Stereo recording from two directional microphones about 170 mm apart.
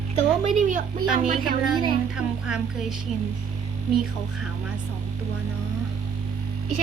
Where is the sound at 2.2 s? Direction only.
5° right (ahead or behind).